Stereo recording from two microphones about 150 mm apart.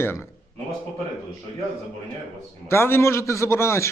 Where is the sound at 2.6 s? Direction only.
15° left (ahead or behind).